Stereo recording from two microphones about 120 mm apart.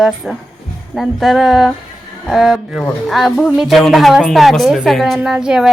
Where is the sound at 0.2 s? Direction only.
Centre (ahead or behind).